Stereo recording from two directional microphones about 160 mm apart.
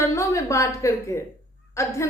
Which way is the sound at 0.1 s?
20° left (ahead or behind).